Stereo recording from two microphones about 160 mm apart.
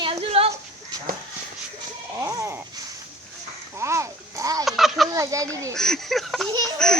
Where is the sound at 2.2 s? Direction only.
20° right (ahead or behind).